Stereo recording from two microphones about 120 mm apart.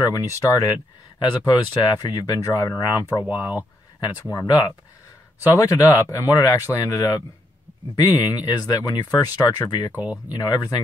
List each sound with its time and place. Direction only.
0.0 s speech: 30° left (ahead or behind)
9.9 s speech: 10° right (ahead or behind)
10.3 s speech: 35° left (ahead or behind)